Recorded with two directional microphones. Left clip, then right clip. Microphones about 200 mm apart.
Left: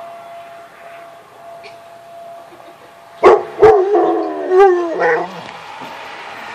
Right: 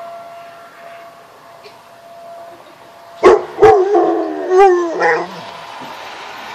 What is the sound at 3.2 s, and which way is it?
Dog, 10° right (ahead or behind).